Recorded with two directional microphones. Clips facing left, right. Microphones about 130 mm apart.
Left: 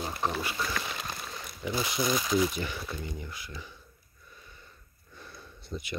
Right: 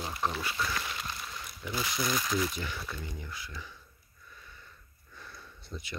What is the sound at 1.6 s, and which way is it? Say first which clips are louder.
Speech: left 4 dB; 20° left (ahead or behind).